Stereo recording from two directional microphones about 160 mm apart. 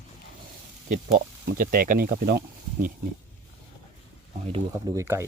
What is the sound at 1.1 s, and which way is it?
Speech, 65° right (ahead or behind).